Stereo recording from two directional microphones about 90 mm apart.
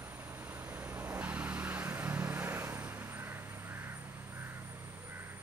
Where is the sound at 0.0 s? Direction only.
25° right (ahead or behind).